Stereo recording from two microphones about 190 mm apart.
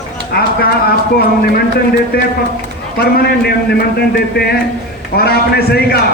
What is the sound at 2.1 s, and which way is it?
A man's voice, 55° left (ahead or behind).